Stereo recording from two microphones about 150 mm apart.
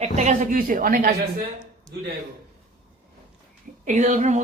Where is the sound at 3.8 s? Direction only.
50° right (ahead or behind).